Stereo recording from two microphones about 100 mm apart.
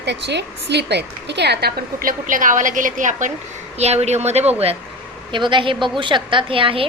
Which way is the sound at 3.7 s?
90° right.